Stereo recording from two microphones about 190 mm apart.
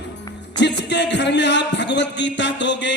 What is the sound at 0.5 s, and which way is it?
A man's voice, 65° left (ahead or behind).